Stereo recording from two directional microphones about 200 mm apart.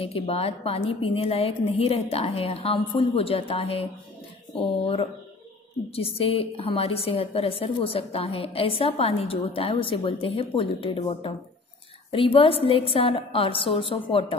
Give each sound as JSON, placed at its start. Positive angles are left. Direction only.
{"t": 0.0, "sound": "a woman's voice", "side_deg": 30}